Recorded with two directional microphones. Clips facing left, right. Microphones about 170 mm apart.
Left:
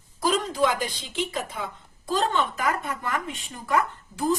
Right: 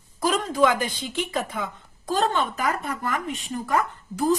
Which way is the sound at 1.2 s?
55° right (ahead or behind).